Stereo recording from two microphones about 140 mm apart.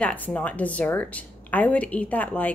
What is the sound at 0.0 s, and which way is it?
A woman's voice, 10° left (ahead or behind).